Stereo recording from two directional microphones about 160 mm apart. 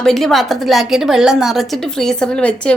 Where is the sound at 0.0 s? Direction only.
Centre (ahead or behind).